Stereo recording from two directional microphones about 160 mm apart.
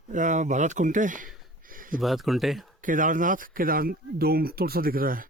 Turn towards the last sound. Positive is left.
turn(degrees=-65)  # may be behind; listen again after turning